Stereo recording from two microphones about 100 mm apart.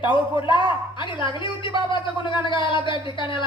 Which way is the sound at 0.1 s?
55° left (ahead or behind).